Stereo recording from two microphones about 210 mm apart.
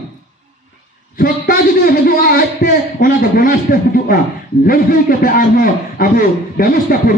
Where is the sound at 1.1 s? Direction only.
45° left (ahead or behind).